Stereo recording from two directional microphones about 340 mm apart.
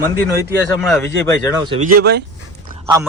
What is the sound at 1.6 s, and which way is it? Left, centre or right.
Speech, centre.